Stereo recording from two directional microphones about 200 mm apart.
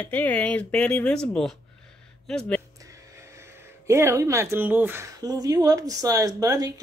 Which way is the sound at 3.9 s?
15° right (ahead or behind).